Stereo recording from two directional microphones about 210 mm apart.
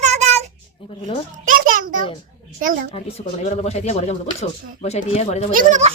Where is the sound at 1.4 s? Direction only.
40° right (ahead or behind).